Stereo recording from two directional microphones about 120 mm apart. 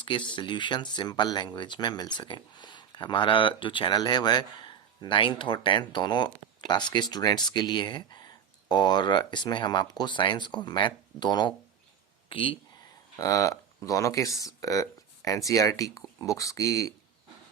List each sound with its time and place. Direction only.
0.0 s speech: 40° left (ahead or behind)
13.1 s speech: 30° left (ahead or behind)